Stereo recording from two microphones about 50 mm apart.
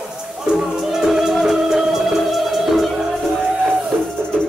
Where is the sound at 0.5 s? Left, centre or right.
Centre.